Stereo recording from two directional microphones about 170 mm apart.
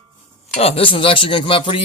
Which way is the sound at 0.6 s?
35° left (ahead or behind).